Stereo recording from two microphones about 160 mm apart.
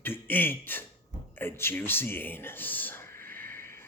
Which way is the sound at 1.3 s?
15° left (ahead or behind).